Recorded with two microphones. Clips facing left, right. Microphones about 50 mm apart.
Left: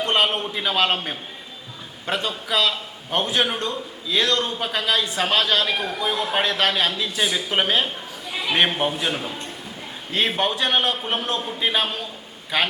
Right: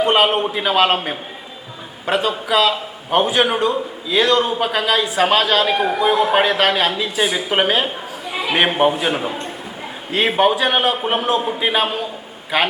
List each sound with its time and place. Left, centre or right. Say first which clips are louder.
0.0 s a man's voice: right 6 dB; centre
2.0 s a man's voice: right 7 dB; centre